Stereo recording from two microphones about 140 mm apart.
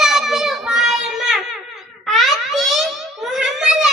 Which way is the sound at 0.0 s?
5° right (ahead or behind).